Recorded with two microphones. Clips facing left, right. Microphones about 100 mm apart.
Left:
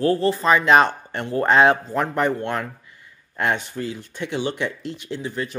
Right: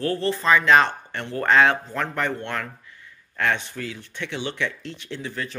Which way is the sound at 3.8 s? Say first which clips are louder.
Left 4 dB; 25° left (ahead or behind).